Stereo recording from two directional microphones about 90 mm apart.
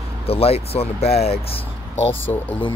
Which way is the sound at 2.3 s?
20° left (ahead or behind).